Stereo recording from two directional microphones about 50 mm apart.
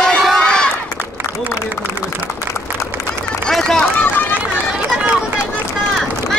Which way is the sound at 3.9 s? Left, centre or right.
Left.